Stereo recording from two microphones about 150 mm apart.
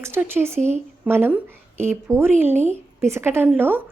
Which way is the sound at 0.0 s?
15° right (ahead or behind).